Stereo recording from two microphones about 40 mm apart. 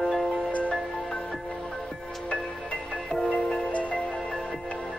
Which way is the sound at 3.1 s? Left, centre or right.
Centre.